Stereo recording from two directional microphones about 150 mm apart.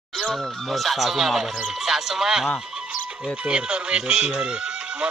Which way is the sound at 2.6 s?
5° right (ahead or behind).